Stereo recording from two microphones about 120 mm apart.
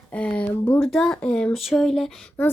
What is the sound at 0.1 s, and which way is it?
Speech, 10° left (ahead or behind).